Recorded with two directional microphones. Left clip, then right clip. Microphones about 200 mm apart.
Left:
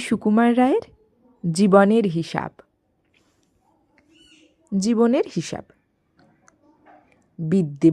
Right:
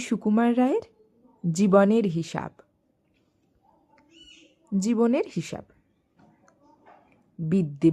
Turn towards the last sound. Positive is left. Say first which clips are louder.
# left 5 dB
turn(degrees=20)  # may be behind; listen again after turning